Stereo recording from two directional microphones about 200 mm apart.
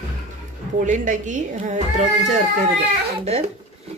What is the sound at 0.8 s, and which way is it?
Speech, 40° right (ahead or behind).